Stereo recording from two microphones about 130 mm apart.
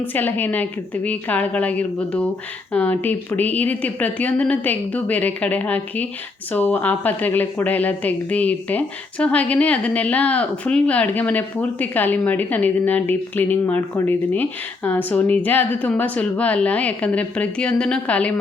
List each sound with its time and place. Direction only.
0.1 s a woman's voice: 15° left (ahead or behind)